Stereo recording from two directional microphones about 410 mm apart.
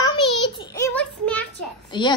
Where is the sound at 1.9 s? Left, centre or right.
Centre.